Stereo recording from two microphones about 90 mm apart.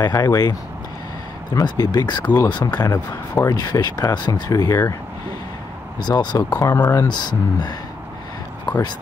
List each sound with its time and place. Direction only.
0.0 s speech: 45° left (ahead or behind)
5.9 s speech: 50° left (ahead or behind)
6.6 s speech: 40° left (ahead or behind)
7.1 s speech: 55° left (ahead or behind)